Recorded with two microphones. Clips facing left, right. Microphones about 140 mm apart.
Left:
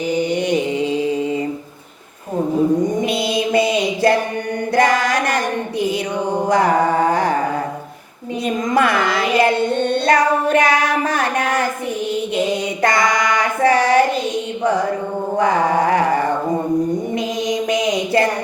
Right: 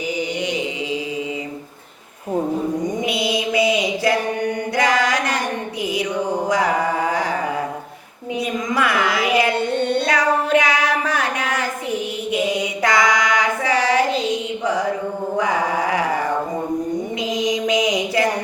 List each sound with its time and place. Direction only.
0.2 s mantra: 55° left (ahead or behind)
3.0 s mantra: 55° left (ahead or behind)
4.7 s a sound: 55° left (ahead or behind)
6.5 s a sound: 55° left (ahead or behind)
8.7 s child singing: 55° left (ahead or behind)
12.8 s child singing: 55° left (ahead or behind)
14.6 s music: 55° left (ahead or behind)
15.4 s mantra: 55° left (ahead or behind)
17.4 s mantra: 55° left (ahead or behind)